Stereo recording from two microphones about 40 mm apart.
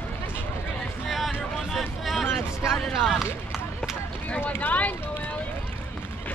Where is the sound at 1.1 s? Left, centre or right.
Centre.